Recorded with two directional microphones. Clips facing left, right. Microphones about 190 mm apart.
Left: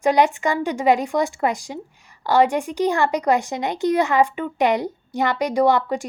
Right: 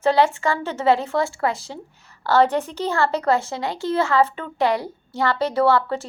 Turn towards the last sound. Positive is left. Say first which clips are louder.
# left 1 dB
turn(degrees=15)  # may be behind; listen again after turning